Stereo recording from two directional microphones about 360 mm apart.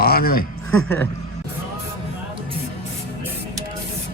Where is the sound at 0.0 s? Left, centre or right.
Left.